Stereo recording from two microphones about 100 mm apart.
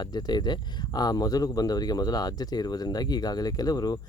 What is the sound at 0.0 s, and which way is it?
Speech, 40° left (ahead or behind).